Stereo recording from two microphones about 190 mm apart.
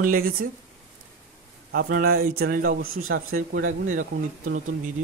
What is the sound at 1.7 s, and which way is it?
Speech, 50° right (ahead or behind).